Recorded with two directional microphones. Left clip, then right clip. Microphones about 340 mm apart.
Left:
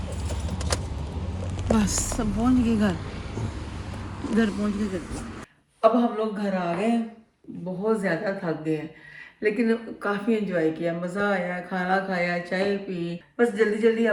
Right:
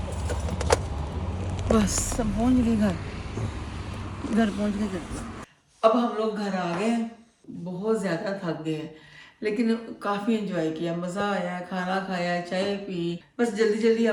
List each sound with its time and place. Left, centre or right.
1.6 s a woman's voice: centre
2.7 s a sound: centre
4.2 s a woman's voice: centre
7.9 s a woman's voice: centre